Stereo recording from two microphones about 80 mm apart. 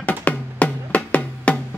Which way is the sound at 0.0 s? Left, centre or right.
Centre.